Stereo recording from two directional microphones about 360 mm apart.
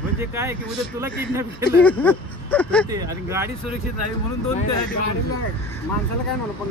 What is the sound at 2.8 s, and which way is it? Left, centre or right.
Speech, centre.